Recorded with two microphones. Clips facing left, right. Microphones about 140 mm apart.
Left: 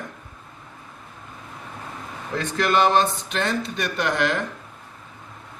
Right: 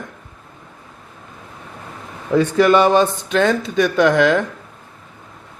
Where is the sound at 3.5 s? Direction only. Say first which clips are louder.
Right 9 dB; 90° right.